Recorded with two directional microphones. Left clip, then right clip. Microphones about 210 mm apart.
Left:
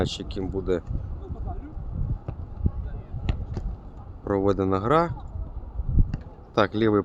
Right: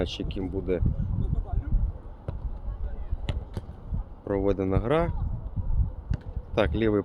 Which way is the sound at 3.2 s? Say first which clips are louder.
Left 2 dB; 50° right (ahead or behind).